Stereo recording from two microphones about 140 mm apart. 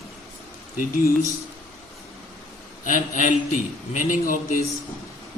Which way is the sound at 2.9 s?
65° left (ahead or behind).